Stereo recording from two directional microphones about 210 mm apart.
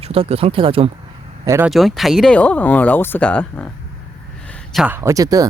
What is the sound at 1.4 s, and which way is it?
Speech, 15° right (ahead or behind).